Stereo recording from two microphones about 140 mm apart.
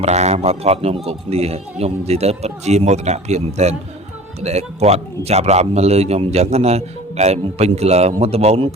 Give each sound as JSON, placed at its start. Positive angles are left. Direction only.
{"t": 0.0, "sound": "a man's voice", "side_deg": -55}